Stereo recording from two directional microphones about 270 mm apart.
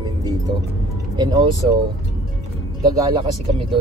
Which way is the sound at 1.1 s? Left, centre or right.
Centre.